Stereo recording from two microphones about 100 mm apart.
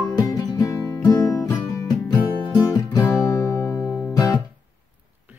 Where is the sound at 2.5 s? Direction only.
35° left (ahead or behind).